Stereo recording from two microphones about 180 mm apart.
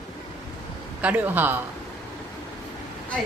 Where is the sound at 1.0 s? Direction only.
10° right (ahead or behind).